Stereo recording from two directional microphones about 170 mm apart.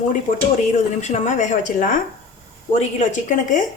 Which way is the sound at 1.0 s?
45° left (ahead or behind).